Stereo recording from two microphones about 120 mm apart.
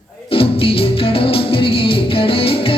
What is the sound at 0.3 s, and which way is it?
Music, 50° left (ahead or behind).